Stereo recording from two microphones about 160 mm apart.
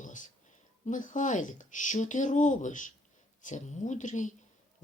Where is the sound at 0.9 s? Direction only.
55° left (ahead or behind).